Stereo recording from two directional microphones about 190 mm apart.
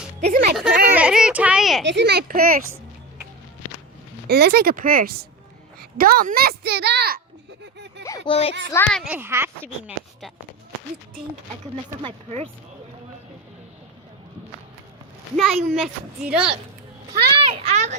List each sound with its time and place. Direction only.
0.3 s speech: 50° right (ahead or behind)
0.5 s speech: centre (ahead or behind)
0.9 s a sound: 5° right (ahead or behind)
1.8 s a woman's voice: 65° right (ahead or behind); by 2.6 s 50° right (ahead or behind)
4.3 s a woman's voice: 55° right (ahead or behind)
7.6 s a sound: 65° right (ahead or behind)
8.3 s a child's voice: 30° left (ahead or behind)
8.7 s a child's voice: 5° left (ahead or behind)
9.0 s speech: 10° right (ahead or behind)
12.0 s a child's voice: 30° right (ahead or behind)
15.7 s a woman's voice: centre (ahead or behind)
17.1 s a child's voice: 30° right (ahead or behind)